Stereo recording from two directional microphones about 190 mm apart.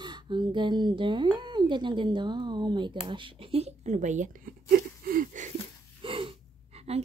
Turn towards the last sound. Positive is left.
turn(degrees=-35)  # may be behind; listen again after turning